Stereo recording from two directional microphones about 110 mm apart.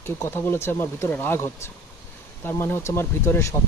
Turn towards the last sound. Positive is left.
turn(degrees=25)  # may be behind; listen again after turning